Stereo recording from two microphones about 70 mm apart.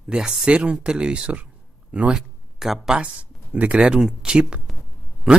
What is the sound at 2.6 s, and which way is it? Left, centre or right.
Speech, centre.